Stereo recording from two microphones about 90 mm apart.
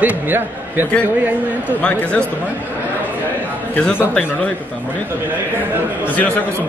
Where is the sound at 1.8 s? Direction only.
10° left (ahead or behind).